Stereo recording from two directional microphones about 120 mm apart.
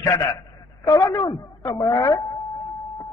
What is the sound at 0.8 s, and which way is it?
A man's voice, 30° left (ahead or behind).